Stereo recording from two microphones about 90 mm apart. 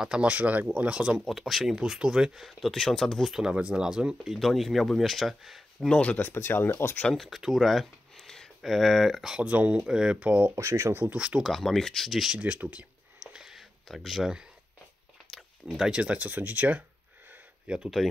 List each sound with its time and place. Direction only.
0.0 s speech: 10° right (ahead or behind)
1.2 s speech: centre (ahead or behind)
5.9 s speech: 15° left (ahead or behind)
7.2 s speech: centre (ahead or behind)
9.4 s speech: 15° right (ahead or behind)
10.5 s speech: 35° right (ahead or behind)
11.0 s speech: 15° right (ahead or behind)
11.4 s speech: 5° left (ahead or behind)
12.4 s a sound: 15° right (ahead or behind)
15.6 s speech: 10° right (ahead or behind)